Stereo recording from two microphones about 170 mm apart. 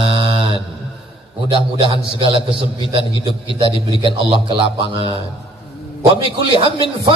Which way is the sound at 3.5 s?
30° right (ahead or behind).